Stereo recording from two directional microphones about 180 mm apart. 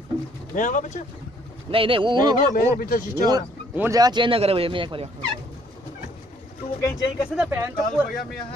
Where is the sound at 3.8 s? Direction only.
20° right (ahead or behind).